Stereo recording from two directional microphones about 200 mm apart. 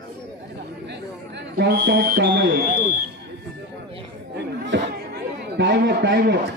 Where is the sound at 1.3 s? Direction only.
55° right (ahead or behind).